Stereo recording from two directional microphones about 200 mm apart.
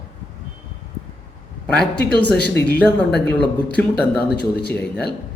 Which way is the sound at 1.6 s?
5° left (ahead or behind).